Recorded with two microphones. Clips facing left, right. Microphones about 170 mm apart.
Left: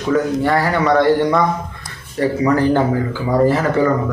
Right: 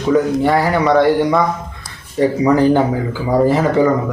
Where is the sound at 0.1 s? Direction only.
10° right (ahead or behind).